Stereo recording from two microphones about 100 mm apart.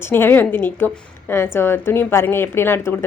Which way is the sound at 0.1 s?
20° left (ahead or behind).